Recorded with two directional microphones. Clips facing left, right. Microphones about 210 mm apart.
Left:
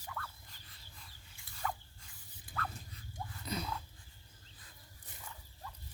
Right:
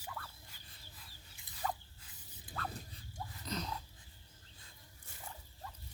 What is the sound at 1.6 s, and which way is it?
Spray, 35° right (ahead or behind).